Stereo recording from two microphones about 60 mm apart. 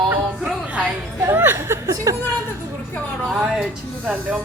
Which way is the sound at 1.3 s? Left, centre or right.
Right.